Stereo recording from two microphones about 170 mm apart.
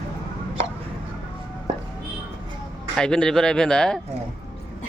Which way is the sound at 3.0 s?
5° left (ahead or behind).